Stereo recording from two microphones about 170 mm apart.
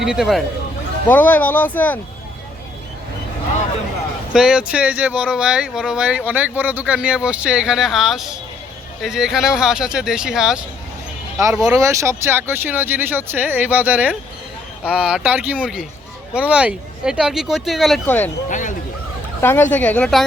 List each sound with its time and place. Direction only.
0.0 s speech: 5° right (ahead or behind)
1.0 s speech: 10° left (ahead or behind)
4.3 s speech: 5° right (ahead or behind)
11.7 s speech: 20° right (ahead or behind); by 18.0 s centre (ahead or behind)
18.0 s speech: 10° left (ahead or behind)
18.4 s speech: 50° left (ahead or behind)
19.4 s speech: 15° left (ahead or behind)